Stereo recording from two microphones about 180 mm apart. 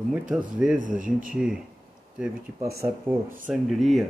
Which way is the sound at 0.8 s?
50° right (ahead or behind).